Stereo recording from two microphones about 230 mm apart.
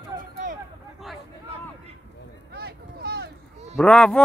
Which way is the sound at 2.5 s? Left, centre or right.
Right.